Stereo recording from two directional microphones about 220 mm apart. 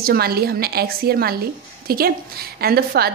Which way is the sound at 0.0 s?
45° right (ahead or behind).